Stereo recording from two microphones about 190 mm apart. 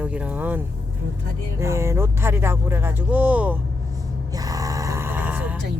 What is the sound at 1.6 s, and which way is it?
Speech, 15° right (ahead or behind).